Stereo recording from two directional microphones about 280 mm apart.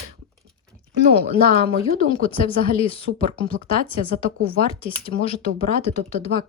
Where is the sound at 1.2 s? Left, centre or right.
Right.